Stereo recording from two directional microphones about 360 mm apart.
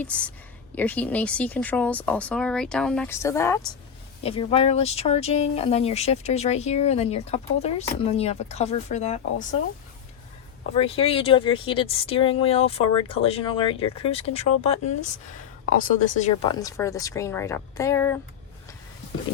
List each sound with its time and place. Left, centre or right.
0.0 s speech: centre
10.8 s speech: centre